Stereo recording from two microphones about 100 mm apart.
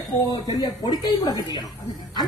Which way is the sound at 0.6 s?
45° left (ahead or behind).